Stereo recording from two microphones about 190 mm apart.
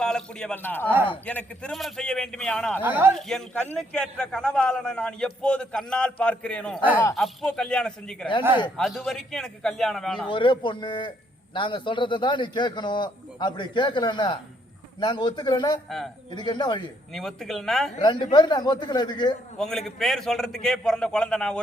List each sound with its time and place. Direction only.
0.0 s a man's voice: 5° left (ahead or behind)
2.8 s speech: 10° right (ahead or behind)
3.2 s a man's voice: centre (ahead or behind)
10.2 s a man's voice: 25° left (ahead or behind)
17.1 s a man's voice: centre (ahead or behind)
18.0 s a man's voice: 25° left (ahead or behind)
19.5 s a man's voice: centre (ahead or behind)